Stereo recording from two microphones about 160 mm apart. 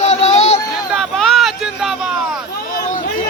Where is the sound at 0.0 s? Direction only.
45° left (ahead or behind).